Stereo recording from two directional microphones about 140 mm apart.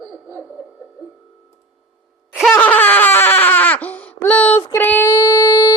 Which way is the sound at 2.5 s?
10° left (ahead or behind).